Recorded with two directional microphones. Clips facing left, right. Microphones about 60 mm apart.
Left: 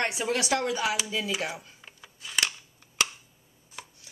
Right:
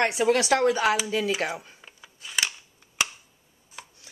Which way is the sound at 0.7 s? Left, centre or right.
Right.